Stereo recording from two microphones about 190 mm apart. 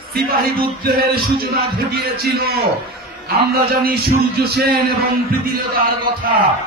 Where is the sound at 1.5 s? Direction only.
55° right (ahead or behind).